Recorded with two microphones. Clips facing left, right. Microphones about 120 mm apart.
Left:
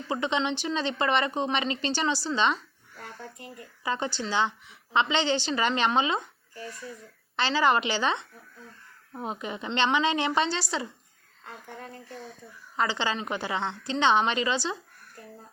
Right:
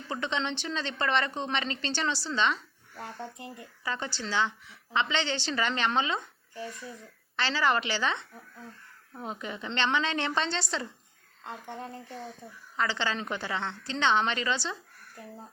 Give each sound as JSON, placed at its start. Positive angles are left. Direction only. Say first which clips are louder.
{"t": 0.1, "sound": "speech", "louder": "left 4 dB", "side_deg": 15}
{"t": 3.8, "sound": "speech", "louder": "left 4 dB", "side_deg": 20}
{"t": 7.3, "sound": "a woman's voice", "louder": "left 4 dB", "side_deg": 20}
{"t": 11.4, "sound": "speech", "louder": "right 3 dB", "side_deg": -25}
{"t": 12.7, "sound": "speech", "louder": "left 2 dB", "side_deg": 15}